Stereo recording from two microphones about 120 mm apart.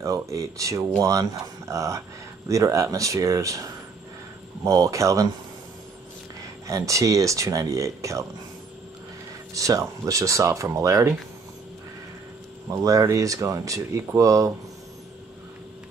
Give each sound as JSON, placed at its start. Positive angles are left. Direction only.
{"t": 0.0, "sound": "speech", "side_deg": -25}
{"t": 6.7, "sound": "speech", "side_deg": -25}
{"t": 9.5, "sound": "speech", "side_deg": -25}
{"t": 12.8, "sound": "speech", "side_deg": -30}